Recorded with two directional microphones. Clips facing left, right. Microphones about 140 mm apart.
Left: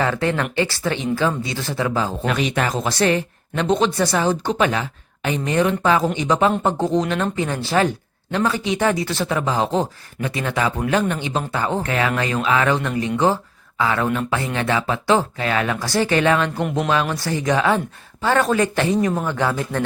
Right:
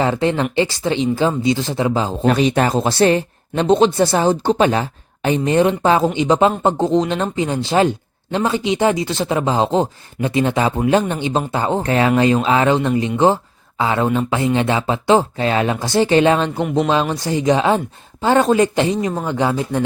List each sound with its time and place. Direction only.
0.0 s speech: 25° right (ahead or behind)
2.2 s speech: 35° right (ahead or behind)
16.6 s speech: centre (ahead or behind)
17.2 s speech: 20° right (ahead or behind)